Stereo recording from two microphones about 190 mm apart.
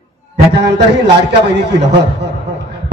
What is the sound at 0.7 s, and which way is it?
A man's voice, 65° right (ahead or behind).